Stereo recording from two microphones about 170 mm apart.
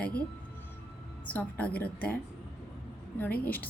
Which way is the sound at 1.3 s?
10° left (ahead or behind).